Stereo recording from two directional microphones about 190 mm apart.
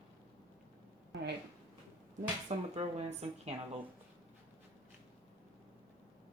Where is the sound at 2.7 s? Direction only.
35° right (ahead or behind).